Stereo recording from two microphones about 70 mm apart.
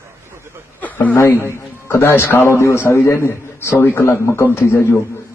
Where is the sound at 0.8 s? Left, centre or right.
Left.